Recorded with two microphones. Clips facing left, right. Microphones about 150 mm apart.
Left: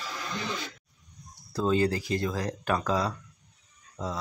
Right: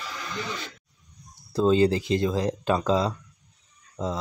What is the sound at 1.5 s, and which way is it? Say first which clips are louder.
Speech: right 5 dB; 25° right (ahead or behind).